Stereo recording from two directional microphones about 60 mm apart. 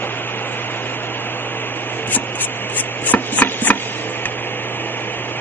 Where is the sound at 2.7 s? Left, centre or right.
Left.